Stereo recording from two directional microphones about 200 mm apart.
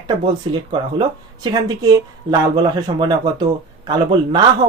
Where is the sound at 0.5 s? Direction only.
25° right (ahead or behind).